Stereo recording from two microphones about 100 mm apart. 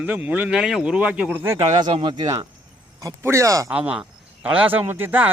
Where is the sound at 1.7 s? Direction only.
50° right (ahead or behind).